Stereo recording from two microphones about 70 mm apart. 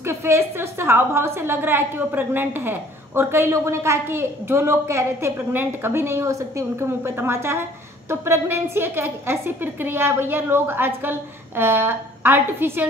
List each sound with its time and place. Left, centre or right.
0.0 s a woman's voice: right